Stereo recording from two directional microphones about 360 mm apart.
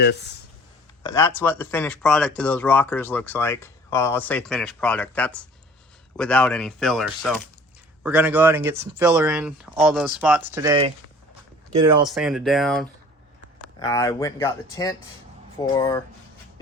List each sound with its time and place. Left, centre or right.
0.0 s speech: left
1.0 s speech: centre
12.0 s speech: centre